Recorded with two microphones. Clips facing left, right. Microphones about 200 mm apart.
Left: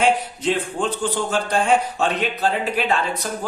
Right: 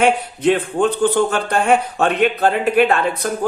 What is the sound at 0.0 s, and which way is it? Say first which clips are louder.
Speech: right 4 dB; 60° right (ahead or behind).